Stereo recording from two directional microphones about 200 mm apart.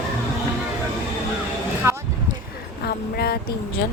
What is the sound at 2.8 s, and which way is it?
Speech, 50° left (ahead or behind).